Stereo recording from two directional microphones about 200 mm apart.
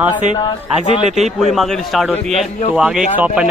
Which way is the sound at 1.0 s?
35° right (ahead or behind).